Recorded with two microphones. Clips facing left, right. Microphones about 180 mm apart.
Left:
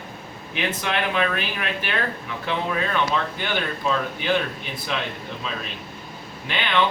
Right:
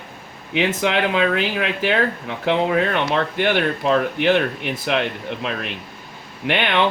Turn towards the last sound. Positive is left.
turn(degrees=-70)  # may be behind; listen again after turning